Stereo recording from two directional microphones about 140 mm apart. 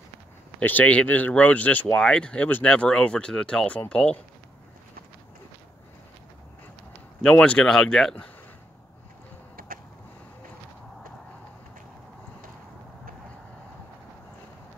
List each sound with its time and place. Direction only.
0.6 s speech: 10° left (ahead or behind)
7.2 s speech: 5° left (ahead or behind)
9.6 s a sound: 90° right